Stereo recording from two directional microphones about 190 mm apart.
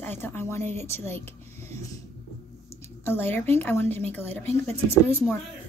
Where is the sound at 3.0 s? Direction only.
10° left (ahead or behind).